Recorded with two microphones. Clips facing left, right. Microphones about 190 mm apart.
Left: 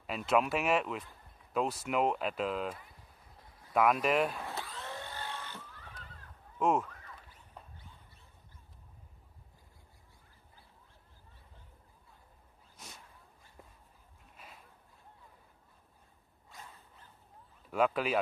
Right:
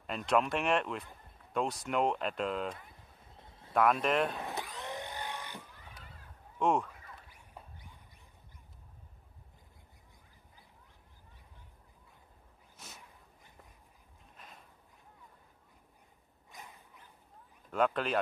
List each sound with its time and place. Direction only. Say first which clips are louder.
0.0 s speech: even; 5° left (ahead or behind)
3.3 s a sound: right 4 dB; 25° right (ahead or behind)
3.7 s speech: even; 5° left (ahead or behind)
4.4 s vehicle: right 2 dB; 15° right (ahead or behind)
6.6 s speech: even; 5° left (ahead or behind)
6.9 s a sound: even; 10° right (ahead or behind)
14.3 s a sound: even; centre (ahead or behind)
16.4 s dog: right 1 dB; 15° right (ahead or behind)
17.6 s speech: left 1 dB; 5° left (ahead or behind)